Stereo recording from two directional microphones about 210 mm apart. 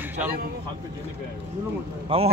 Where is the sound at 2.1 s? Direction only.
25° right (ahead or behind).